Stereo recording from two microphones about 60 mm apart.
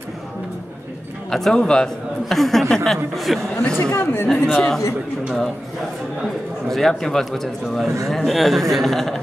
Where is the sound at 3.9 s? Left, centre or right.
Left.